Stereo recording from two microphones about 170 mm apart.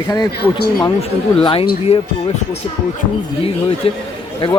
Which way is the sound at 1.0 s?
30° left (ahead or behind).